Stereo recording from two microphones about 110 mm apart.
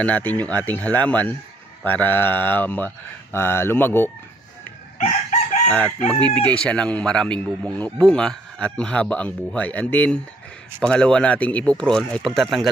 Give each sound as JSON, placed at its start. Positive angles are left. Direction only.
{"t": 0.0, "sound": "speech", "side_deg": 15}
{"t": 4.9, "sound": "chicken", "side_deg": 90}
{"t": 6.1, "sound": "speech", "side_deg": 10}